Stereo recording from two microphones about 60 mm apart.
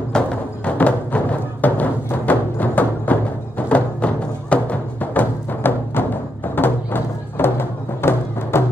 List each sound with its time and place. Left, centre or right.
0.1 s music: centre
0.7 s music: left